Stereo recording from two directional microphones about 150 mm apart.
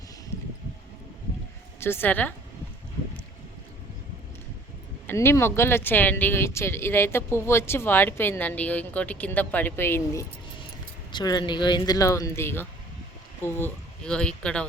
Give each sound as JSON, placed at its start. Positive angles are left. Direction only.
{"t": 1.8, "sound": "speech", "side_deg": 15}
{"t": 5.0, "sound": "speech", "side_deg": 15}
{"t": 11.1, "sound": "speech", "side_deg": 25}